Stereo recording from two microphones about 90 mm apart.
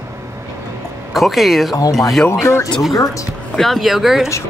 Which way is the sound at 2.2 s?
30° left (ahead or behind).